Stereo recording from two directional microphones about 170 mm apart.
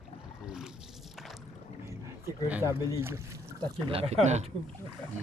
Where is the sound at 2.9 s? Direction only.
15° right (ahead or behind).